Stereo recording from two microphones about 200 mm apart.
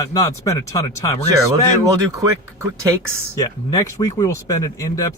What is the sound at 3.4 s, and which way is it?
Speech, 15° left (ahead or behind).